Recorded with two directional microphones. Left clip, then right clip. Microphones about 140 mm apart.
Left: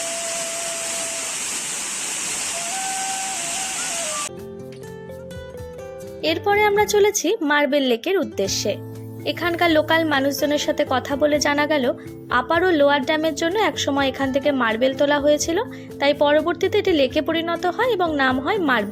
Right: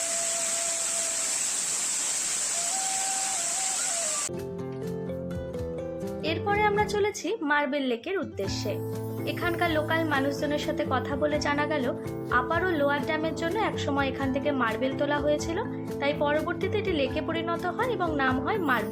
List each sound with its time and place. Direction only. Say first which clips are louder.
6.2 s a woman's voice: left 8 dB; 45° left (ahead or behind)